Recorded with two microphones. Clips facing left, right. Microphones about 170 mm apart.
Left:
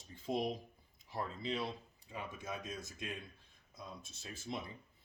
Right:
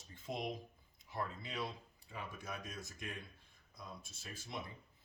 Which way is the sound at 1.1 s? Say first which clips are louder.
Left 3 dB; 25° left (ahead or behind).